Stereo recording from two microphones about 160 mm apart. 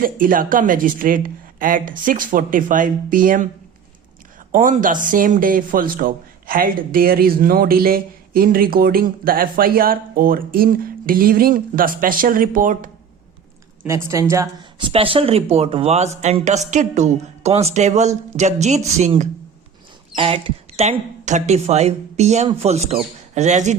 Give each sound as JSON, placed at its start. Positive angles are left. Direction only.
{"t": 0.0, "sound": "speech", "side_deg": -60}
{"t": 4.5, "sound": "speech", "side_deg": -55}
{"t": 13.8, "sound": "speech", "side_deg": -15}
{"t": 14.8, "sound": "a woman's voice", "side_deg": -35}
{"t": 20.1, "sound": "a woman's voice", "side_deg": -35}